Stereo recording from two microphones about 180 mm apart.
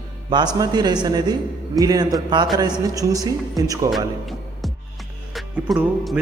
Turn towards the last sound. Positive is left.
turn(degrees=0)  # may be behind; listen again after turning